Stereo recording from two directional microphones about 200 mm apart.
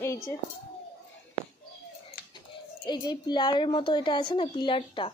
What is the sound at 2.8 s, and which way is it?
A woman's voice, 20° left (ahead or behind).